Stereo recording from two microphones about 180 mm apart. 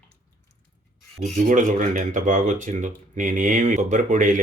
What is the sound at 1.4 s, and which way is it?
Speech, 45° right (ahead or behind).